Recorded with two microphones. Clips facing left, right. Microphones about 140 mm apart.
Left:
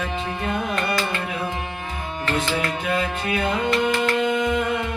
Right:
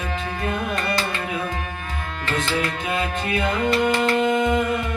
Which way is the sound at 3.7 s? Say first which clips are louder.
Right 2 dB; 35° right (ahead or behind).